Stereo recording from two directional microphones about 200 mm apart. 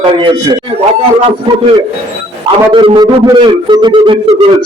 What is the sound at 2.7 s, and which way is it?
A man's voice, 25° right (ahead or behind).